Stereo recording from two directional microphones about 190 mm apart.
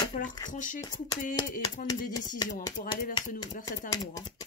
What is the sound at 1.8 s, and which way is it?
Speech, 50° left (ahead or behind).